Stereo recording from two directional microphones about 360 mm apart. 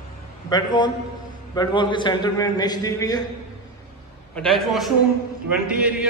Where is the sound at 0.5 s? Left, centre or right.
Centre.